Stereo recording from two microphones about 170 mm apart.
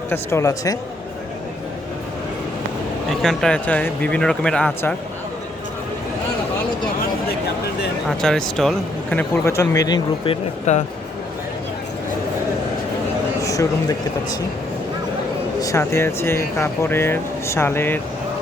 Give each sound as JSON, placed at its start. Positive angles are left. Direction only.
{"t": 0.1, "sound": "speech", "side_deg": 15}
{"t": 3.1, "sound": "speech", "side_deg": 0}
{"t": 8.0, "sound": "speech", "side_deg": 0}
{"t": 10.7, "sound": "speech", "side_deg": 45}
{"t": 13.4, "sound": "a sound", "side_deg": 20}
{"t": 15.6, "sound": "speech", "side_deg": 15}